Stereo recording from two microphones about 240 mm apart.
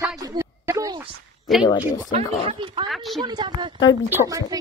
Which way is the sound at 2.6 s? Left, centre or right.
Right.